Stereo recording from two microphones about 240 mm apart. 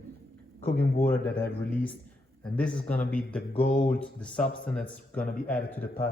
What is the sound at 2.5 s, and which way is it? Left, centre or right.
A man's voice, centre.